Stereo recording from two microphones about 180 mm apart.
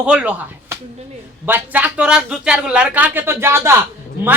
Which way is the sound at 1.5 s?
10° right (ahead or behind).